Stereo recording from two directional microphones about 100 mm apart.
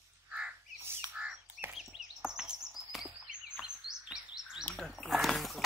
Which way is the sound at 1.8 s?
5° right (ahead or behind).